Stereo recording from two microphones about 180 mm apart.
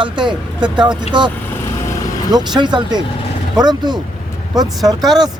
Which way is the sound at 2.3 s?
25° right (ahead or behind).